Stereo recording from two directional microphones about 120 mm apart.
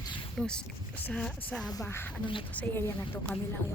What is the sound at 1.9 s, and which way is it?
Speech, 20° left (ahead or behind).